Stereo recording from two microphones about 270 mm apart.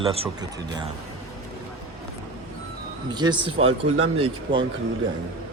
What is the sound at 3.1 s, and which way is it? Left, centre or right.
Speech, centre.